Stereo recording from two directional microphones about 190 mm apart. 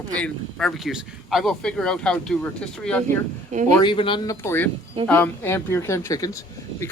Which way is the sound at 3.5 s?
40° right (ahead or behind).